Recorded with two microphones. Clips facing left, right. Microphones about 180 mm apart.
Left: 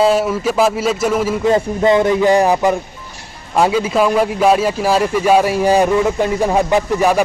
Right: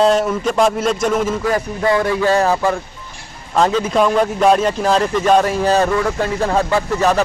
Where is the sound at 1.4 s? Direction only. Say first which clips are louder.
Left 4 dB; 20° left (ahead or behind).